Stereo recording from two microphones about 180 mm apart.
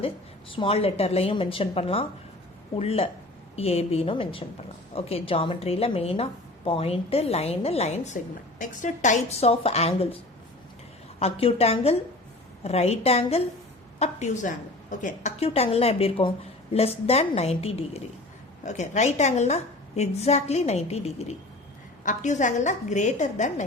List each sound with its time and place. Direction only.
0.5 s a woman's voice: 30° left (ahead or behind)
11.2 s a woman's voice: 30° left (ahead or behind)